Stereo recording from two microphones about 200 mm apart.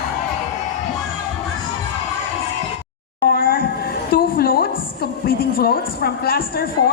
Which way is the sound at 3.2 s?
45° left (ahead or behind).